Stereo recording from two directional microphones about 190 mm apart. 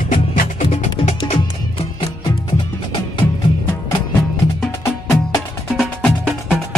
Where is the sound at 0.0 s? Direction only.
45° left (ahead or behind).